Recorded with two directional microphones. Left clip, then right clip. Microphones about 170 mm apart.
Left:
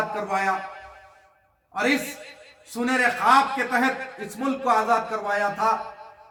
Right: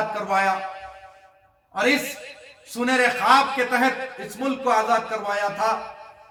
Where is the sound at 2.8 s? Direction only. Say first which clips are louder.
Right 2 dB; 15° left (ahead or behind).